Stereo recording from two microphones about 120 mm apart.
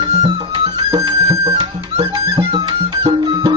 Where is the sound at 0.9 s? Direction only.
30° right (ahead or behind).